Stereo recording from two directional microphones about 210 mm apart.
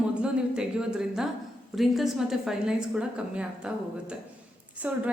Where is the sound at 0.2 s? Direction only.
5° right (ahead or behind).